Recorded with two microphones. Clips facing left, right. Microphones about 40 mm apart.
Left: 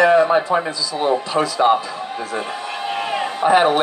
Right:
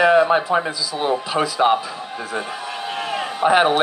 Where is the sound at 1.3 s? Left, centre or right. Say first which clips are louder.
Left 1 dB; centre.